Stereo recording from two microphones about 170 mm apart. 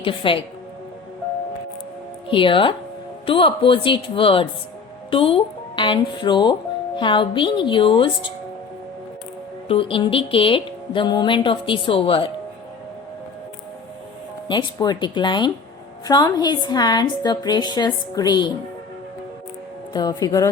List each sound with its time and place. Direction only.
0.0 s speech: 30° left (ahead or behind)
2.3 s speech: 30° left (ahead or behind)
9.6 s speech: 35° left (ahead or behind)
14.4 s speech: 25° left (ahead or behind)
19.9 s speech: 20° left (ahead or behind)